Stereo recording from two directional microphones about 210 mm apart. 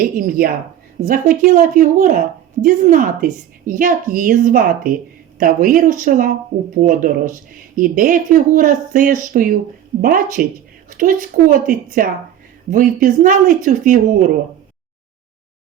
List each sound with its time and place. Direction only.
0.0 s a woman's voice: 45° right (ahead or behind)